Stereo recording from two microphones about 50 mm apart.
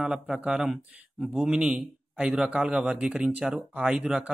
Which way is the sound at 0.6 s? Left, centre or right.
Centre.